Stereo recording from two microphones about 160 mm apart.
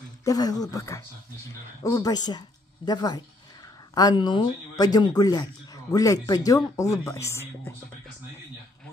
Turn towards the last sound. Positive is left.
turn(degrees=15)  # may be behind; listen again after turning